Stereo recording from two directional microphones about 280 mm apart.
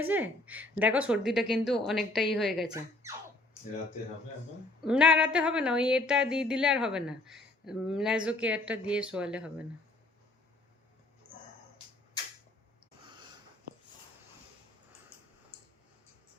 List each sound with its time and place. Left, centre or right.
0.0 s speech: centre
4.8 s speech: centre